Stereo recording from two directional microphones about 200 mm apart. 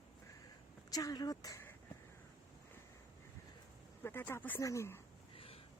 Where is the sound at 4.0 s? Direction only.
10° left (ahead or behind).